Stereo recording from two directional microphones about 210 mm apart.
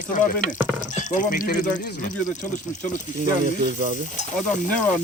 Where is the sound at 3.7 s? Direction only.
35° right (ahead or behind).